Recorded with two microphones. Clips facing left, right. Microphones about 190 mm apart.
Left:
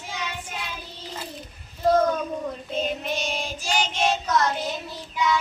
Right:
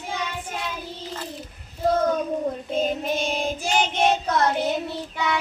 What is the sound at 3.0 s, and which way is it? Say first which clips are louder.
Child singing: right 4 dB; 50° right (ahead or behind).